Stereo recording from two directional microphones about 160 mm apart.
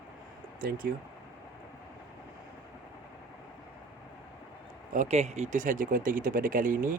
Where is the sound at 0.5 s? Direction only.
60° right (ahead or behind).